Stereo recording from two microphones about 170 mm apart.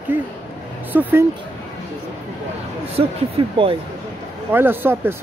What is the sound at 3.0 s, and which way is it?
Speech, 35° right (ahead or behind).